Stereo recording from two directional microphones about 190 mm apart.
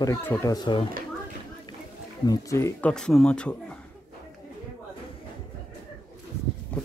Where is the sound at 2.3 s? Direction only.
15° left (ahead or behind).